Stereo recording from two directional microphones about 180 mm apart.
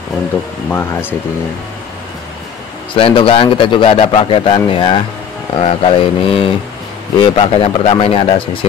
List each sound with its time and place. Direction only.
0.7 s speech: 10° left (ahead or behind)
2.9 s a man's voice: 30° left (ahead or behind)